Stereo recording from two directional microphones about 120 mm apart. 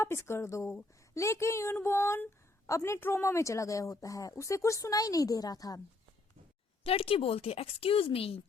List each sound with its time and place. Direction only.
0.0 s speech: 20° left (ahead or behind)
6.8 s a woman's voice: 55° left (ahead or behind)